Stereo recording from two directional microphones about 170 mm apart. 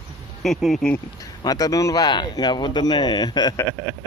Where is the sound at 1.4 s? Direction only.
20° left (ahead or behind).